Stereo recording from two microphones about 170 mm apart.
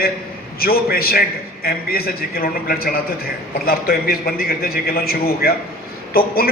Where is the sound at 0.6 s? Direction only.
60° left (ahead or behind).